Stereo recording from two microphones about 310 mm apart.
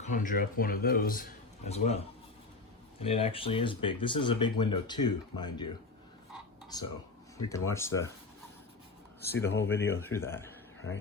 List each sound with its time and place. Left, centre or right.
0.0 s a man's voice: left
3.0 s speech: centre
6.7 s speech: centre
9.2 s speech: centre